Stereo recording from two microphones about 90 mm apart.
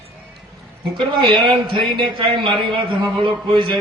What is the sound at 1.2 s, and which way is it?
A man's voice, 65° right (ahead or behind).